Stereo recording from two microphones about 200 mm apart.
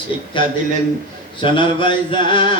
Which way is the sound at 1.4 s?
25° left (ahead or behind).